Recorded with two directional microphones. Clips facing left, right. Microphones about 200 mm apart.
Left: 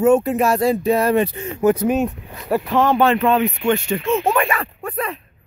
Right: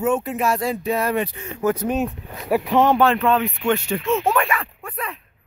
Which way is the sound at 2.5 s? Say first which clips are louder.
Even; 15° right (ahead or behind).